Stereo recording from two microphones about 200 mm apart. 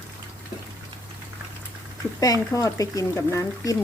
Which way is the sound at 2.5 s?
15° left (ahead or behind).